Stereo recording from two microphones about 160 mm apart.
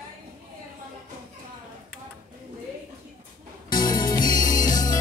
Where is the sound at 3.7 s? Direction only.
25° left (ahead or behind).